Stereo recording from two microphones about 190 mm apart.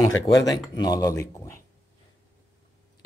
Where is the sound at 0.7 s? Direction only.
20° left (ahead or behind).